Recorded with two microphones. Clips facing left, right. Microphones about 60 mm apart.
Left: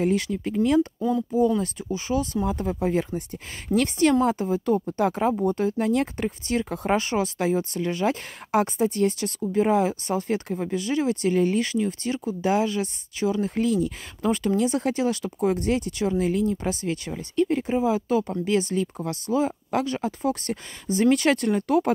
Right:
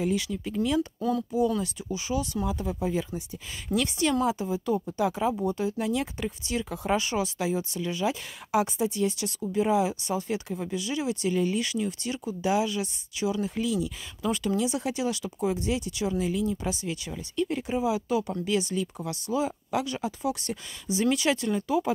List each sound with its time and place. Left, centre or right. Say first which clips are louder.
0.0 s speech: left 5 dB; left